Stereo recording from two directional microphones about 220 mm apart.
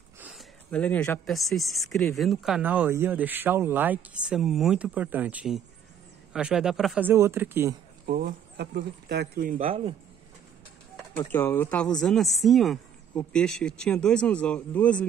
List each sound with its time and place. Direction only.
0.2 s speech: centre (ahead or behind)
8.1 s speech: 45° right (ahead or behind)
9.7 s speech: 25° right (ahead or behind)
11.1 s speech: 10° left (ahead or behind)